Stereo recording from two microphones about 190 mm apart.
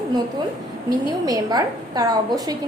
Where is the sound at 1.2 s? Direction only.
20° right (ahead or behind).